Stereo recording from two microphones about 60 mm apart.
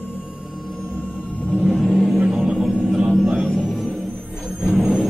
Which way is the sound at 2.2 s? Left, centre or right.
Centre.